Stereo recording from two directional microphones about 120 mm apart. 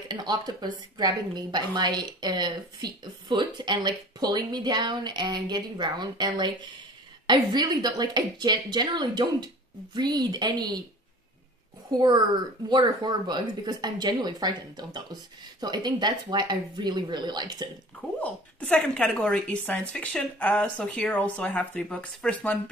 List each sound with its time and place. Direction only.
0.2 s a woman's voice: 35° right (ahead or behind)
11.9 s a woman's voice: 35° right (ahead or behind)
18.2 s a woman's voice: 10° left (ahead or behind)